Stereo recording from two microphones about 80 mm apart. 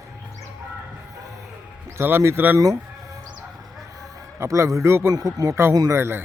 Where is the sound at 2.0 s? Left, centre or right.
Right.